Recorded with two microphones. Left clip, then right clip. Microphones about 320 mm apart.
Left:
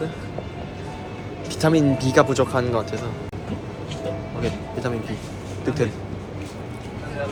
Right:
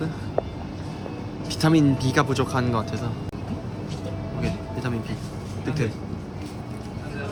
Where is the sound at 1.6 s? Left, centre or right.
Centre.